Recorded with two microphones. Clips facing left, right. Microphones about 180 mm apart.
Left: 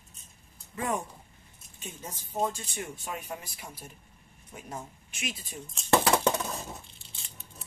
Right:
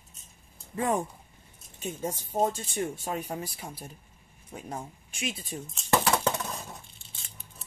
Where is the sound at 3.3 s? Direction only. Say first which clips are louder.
Right 5 dB; 30° right (ahead or behind).